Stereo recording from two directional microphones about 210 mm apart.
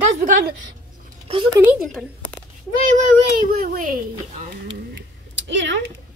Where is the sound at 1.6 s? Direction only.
5° right (ahead or behind).